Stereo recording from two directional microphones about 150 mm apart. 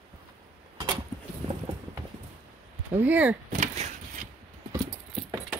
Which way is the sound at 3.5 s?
50° right (ahead or behind).